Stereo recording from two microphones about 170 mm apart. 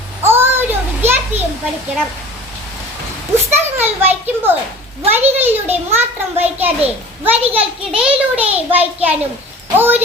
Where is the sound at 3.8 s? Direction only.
10° right (ahead or behind).